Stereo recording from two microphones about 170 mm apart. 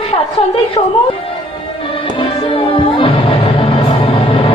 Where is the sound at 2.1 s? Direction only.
30° left (ahead or behind).